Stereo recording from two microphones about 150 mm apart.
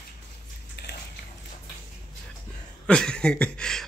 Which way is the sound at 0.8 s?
90° left.